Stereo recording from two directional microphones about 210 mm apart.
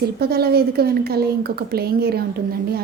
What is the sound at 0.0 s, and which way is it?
A woman's voice, 50° right (ahead or behind).